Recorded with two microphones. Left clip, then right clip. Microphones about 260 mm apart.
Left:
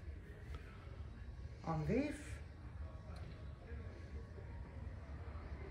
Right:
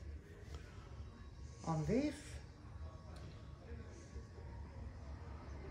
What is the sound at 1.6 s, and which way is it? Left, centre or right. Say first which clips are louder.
Speech: right 1 dB; right.